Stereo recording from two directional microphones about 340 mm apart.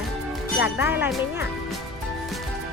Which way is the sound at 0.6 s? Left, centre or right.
Centre.